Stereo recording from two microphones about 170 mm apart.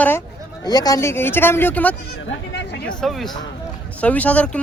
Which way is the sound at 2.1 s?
85° left.